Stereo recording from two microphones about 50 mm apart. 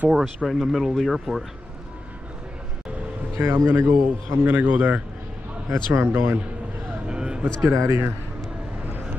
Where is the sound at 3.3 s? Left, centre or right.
Right.